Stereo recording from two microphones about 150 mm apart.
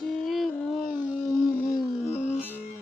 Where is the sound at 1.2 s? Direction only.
15° left (ahead or behind).